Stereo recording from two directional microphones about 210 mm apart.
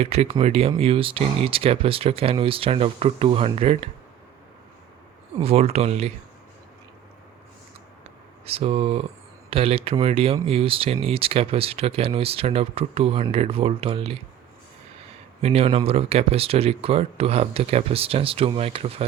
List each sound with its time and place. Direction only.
0.0 s speech: 30° right (ahead or behind)
5.4 s speech: 30° right (ahead or behind)
8.0 s a sound: 25° right (ahead or behind)
9.5 s speech: 25° right (ahead or behind)
15.4 s speech: 30° right (ahead or behind)